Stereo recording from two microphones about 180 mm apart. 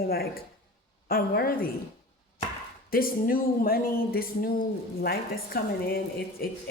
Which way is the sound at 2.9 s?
55° left (ahead or behind).